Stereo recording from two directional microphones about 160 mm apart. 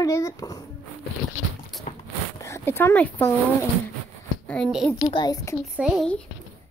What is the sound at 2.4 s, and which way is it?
Speech, 15° left (ahead or behind).